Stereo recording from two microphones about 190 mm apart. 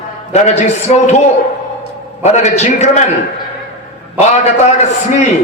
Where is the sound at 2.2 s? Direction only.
35° left (ahead or behind).